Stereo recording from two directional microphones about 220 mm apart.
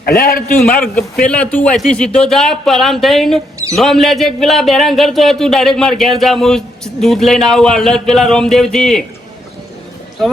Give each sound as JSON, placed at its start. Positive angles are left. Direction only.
{"t": 0.0, "sound": "a man's voice", "side_deg": 45}
{"t": 0.6, "sound": "a man's voice", "side_deg": 5}